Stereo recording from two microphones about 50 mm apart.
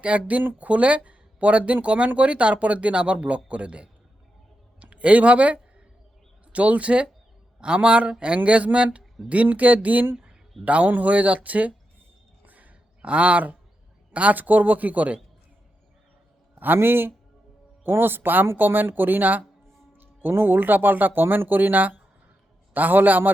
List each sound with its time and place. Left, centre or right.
0.0 s a woman's voice: right
12.5 s a sound: right
14.1 s a woman's voice: right
16.6 s a woman's voice: right